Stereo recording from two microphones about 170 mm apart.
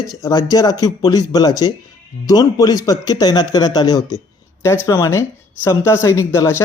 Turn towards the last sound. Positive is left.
turn(degrees=15)  # may be behind; listen again after turning